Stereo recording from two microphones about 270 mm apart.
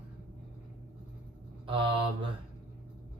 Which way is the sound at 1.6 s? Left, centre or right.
Centre.